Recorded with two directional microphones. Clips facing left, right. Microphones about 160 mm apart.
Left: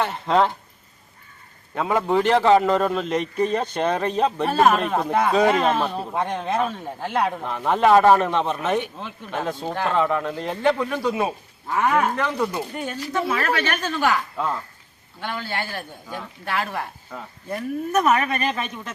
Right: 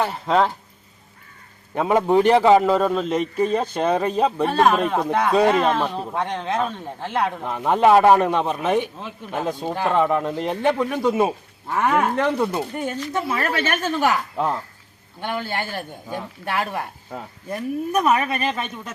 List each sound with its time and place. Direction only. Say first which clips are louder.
0.0 s speech: even; 5° right (ahead or behind)
1.7 s a man's voice: right 3 dB; 20° right (ahead or behind)
4.4 s a man's voice: left 1 dB; 5° left (ahead or behind); by 12.0 s 15° right (ahead or behind)
12.3 s speech: right 3 dB; 30° right (ahead or behind)
13.8 s a man's voice: right 3 dB; 15° right (ahead or behind)